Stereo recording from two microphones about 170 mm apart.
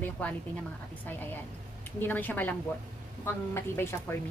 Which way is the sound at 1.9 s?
10° left (ahead or behind).